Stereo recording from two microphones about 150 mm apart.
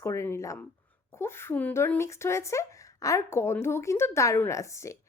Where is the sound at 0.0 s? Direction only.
20° left (ahead or behind).